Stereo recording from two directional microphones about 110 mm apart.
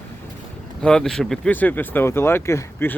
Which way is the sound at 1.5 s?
15° left (ahead or behind).